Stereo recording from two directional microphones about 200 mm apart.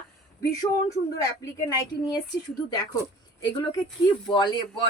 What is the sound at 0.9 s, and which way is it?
A woman's voice, 20° left (ahead or behind).